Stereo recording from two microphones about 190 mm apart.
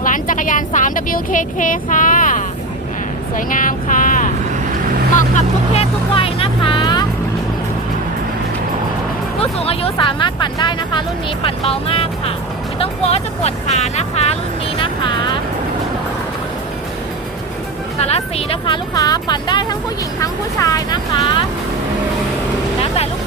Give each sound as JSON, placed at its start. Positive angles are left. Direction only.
{"t": 0.0, "sound": "speech", "side_deg": 45}
{"t": 5.7, "sound": "vehicle", "side_deg": 30}
{"t": 9.4, "sound": "speech", "side_deg": 30}
{"t": 14.8, "sound": "music", "side_deg": 25}
{"t": 18.0, "sound": "speech", "side_deg": 30}